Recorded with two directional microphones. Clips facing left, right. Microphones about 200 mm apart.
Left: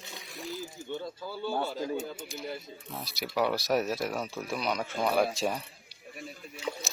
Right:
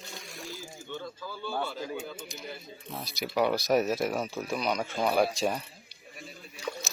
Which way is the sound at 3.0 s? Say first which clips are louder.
Right 2 dB; centre (ahead or behind).